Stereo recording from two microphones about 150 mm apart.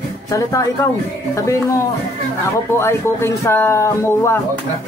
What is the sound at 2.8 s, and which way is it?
Speech, 20° left (ahead or behind).